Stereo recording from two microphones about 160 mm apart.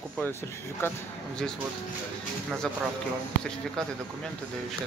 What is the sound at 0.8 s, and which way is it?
Speech, 15° left (ahead or behind).